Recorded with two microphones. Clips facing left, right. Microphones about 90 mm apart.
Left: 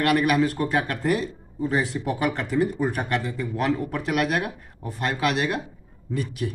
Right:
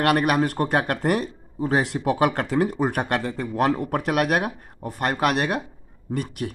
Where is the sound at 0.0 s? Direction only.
50° right (ahead or behind).